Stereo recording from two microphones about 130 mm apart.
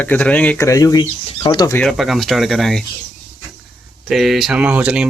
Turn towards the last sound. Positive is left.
turn(degrees=-10)  # may be behind; listen again after turning